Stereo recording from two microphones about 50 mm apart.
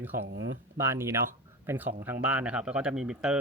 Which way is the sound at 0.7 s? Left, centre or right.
Right.